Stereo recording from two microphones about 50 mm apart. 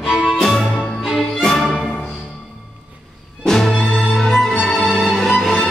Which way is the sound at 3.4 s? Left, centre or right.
Centre.